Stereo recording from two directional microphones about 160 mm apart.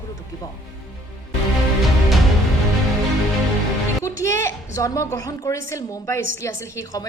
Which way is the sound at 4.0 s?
20° left (ahead or behind).